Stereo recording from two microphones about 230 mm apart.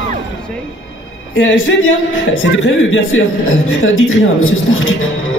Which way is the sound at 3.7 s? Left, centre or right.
Left.